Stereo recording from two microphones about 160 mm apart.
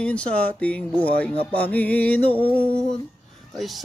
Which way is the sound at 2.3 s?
35° right (ahead or behind).